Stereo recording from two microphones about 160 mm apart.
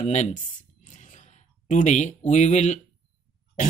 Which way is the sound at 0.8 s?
50° left (ahead or behind).